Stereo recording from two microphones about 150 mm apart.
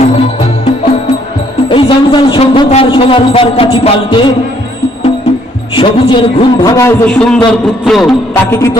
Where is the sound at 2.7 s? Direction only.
40° left (ahead or behind).